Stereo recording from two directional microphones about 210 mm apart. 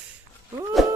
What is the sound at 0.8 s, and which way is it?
Music, centre (ahead or behind).